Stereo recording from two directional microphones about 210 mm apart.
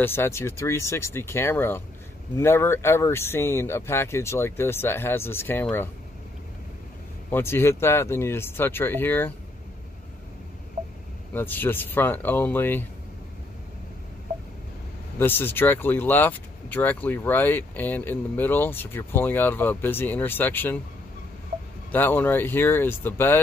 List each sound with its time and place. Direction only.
0.0 s speech: 10° left (ahead or behind)
7.2 s speech: 10° left (ahead or behind)
10.8 s a sound: 35° right (ahead or behind)
11.3 s speech: 10° left (ahead or behind)
15.1 s speech: 10° left (ahead or behind)
21.9 s speech: 10° left (ahead or behind)